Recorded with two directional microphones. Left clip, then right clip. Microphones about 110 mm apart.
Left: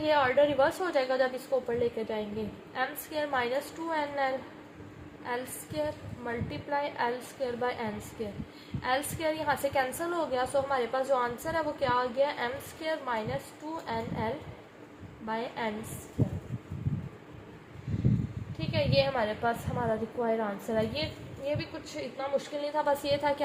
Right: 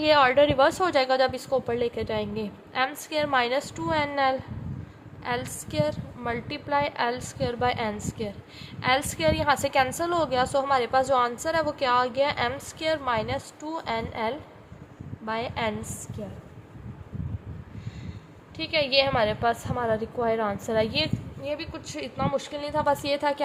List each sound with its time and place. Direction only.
0.0 s a woman's voice: 75° right (ahead or behind); by 15.7 s 45° right (ahead or behind)
18.5 s a woman's voice: 60° right (ahead or behind)
21.4 s a woman's voice: 35° right (ahead or behind)
21.9 s a woman's voice: 55° right (ahead or behind)